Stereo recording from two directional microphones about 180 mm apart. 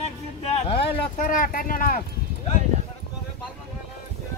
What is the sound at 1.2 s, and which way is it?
Speech, 50° left (ahead or behind).